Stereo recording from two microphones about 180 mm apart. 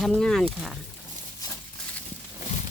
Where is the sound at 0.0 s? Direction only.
5° left (ahead or behind).